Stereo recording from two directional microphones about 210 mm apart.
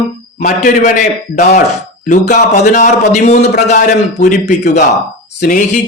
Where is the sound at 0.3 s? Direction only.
35° left (ahead or behind).